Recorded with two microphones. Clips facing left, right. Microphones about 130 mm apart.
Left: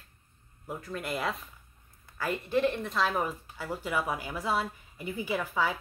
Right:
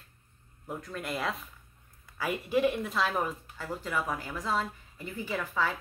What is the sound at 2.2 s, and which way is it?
Speech, 10° right (ahead or behind).